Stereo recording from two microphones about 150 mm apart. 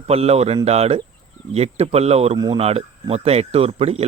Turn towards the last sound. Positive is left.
turn(degrees=-40)  # may be behind; listen again after turning